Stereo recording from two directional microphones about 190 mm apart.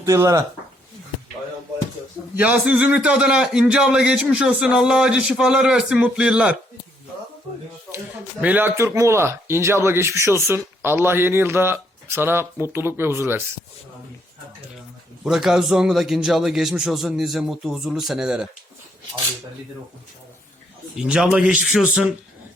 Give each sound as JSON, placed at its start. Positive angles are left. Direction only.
{"t": 0.0, "sound": "speech", "side_deg": -15}
{"t": 2.3, "sound": "a man's voice", "side_deg": -5}
{"t": 7.9, "sound": "speech", "side_deg": -10}
{"t": 15.2, "sound": "a man's voice", "side_deg": 0}
{"t": 20.9, "sound": "a man's voice", "side_deg": -5}